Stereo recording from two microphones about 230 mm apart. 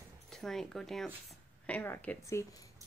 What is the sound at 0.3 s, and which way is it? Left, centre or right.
Speech, centre.